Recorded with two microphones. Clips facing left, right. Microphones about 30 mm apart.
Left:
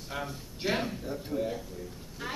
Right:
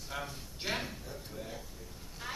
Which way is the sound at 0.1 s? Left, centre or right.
Centre.